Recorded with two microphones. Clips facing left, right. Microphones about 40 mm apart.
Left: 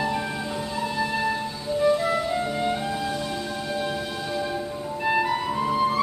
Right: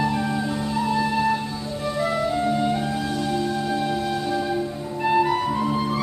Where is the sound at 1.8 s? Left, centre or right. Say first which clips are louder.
Left 1 dB; centre.